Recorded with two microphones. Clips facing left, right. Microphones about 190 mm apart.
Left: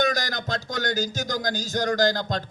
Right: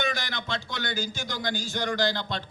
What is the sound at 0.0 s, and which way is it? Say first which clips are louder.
A man's voice: left 6 dB; 40° left (ahead or behind).